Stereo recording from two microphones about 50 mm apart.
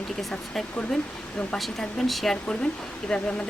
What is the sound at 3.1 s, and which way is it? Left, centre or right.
Speech, left.